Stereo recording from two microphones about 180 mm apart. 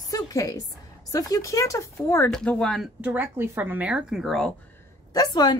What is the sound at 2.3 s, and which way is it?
Speech, 5° left (ahead or behind).